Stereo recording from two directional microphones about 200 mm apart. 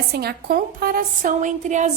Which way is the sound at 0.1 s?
50° right (ahead or behind).